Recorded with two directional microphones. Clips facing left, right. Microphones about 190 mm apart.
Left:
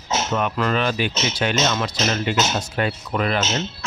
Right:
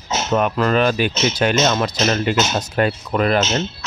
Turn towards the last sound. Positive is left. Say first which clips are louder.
# right 5 dB
turn(degrees=-45)  # may be behind; listen again after turning